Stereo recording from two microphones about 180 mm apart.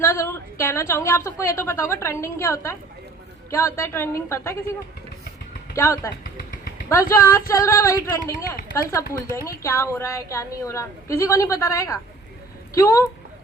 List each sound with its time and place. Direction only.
0.0 s a woman's voice: 15° left (ahead or behind)
5.7 s a woman's voice: 15° left (ahead or behind)